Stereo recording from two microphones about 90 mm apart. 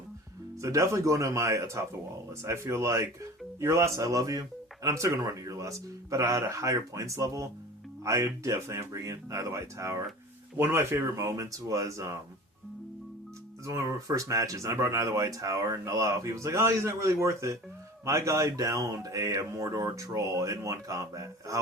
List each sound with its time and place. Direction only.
0.6 s speech: 35° right (ahead or behind)
13.7 s speech: 40° right (ahead or behind)